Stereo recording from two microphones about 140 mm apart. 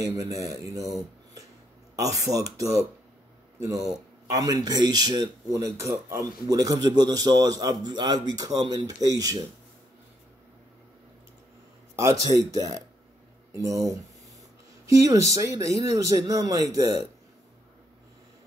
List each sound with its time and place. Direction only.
0.0 s speech: 25° right (ahead or behind)
2.0 s speech: 25° right (ahead or behind)
12.3 s speech: 25° right (ahead or behind)